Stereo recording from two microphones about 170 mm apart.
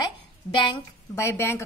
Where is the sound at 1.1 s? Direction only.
15° left (ahead or behind).